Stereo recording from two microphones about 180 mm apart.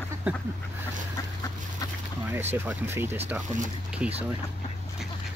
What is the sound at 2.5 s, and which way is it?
Speech, 10° right (ahead or behind).